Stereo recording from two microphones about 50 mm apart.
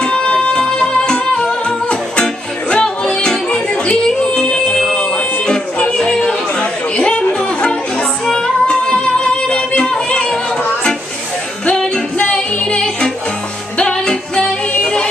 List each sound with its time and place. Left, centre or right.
0.0 s music: left
5.9 s chatter: centre
8.3 s music: centre
11.6 s music: left